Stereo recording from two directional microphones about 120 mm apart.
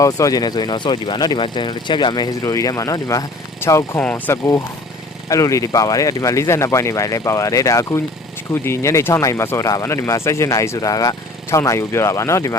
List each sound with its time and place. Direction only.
0.0 s speech: 30° left (ahead or behind)
5.3 s speech: 25° left (ahead or behind)